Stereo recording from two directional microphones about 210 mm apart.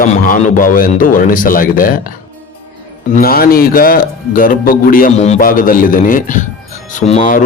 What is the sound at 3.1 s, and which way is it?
Speech, 45° left (ahead or behind).